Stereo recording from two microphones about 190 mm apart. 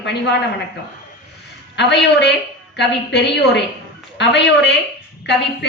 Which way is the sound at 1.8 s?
65° left (ahead or behind).